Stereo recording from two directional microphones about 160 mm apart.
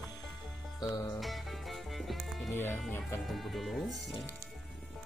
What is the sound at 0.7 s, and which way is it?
Music, 25° left (ahead or behind).